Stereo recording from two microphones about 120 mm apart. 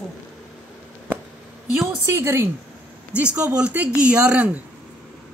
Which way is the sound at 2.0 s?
20° right (ahead or behind).